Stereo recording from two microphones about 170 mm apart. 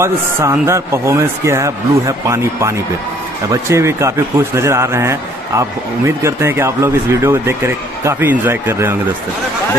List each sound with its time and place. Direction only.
0.0 s a man's voice: 15° right (ahead or behind)